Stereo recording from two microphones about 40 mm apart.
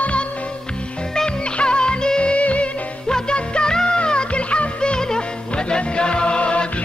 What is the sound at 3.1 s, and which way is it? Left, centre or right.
Music, left.